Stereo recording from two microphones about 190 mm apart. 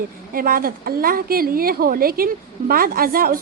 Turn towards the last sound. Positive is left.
turn(degrees=-50)  # may be behind; listen again after turning